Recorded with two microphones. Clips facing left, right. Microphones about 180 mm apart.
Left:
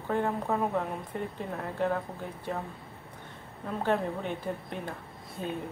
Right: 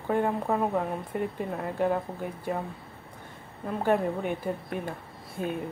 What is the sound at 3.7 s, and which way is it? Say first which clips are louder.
Speech: right 3 dB; 10° right (ahead or behind).